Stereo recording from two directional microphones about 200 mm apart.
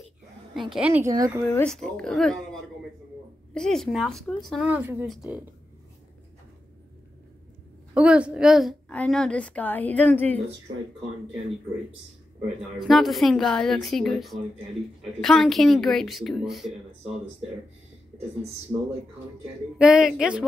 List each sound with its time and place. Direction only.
0.6 s a woman's voice: 5° right (ahead or behind)
1.4 s a woman's voice: 10° left (ahead or behind)
7.9 s a woman's voice: 5° right (ahead or behind)
12.7 s a woman's voice: centre (ahead or behind)
18.7 s a woman's voice: 5° right (ahead or behind)